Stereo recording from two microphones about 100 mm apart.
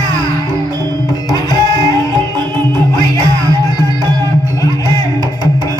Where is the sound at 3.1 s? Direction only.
40° right (ahead or behind).